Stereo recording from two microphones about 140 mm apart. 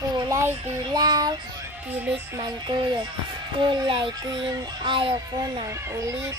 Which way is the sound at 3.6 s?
35° right (ahead or behind).